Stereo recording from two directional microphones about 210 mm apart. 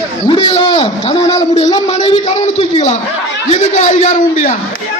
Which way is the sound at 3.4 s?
35° left (ahead or behind).